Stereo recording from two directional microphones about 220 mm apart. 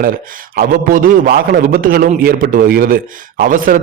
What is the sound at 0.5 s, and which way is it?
A man's voice, 40° right (ahead or behind).